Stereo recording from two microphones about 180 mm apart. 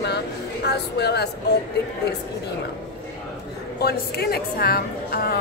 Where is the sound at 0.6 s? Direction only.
65° left (ahead or behind).